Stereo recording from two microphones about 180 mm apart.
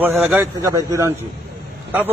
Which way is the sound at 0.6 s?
15° right (ahead or behind).